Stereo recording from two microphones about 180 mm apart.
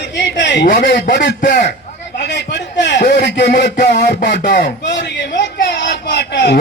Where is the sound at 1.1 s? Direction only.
75° left (ahead or behind).